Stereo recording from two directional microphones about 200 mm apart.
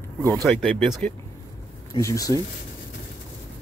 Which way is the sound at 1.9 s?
15° left (ahead or behind).